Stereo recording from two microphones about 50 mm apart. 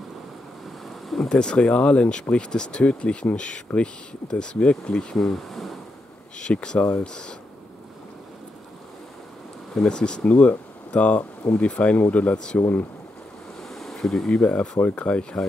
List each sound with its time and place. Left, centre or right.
0.8 s a sound: centre
1.3 s speech: centre
5.1 s speech: centre
6.4 s speech: centre
9.8 s speech: centre
12.5 s speech: left
13.6 s ocean: centre
14.3 s speech: left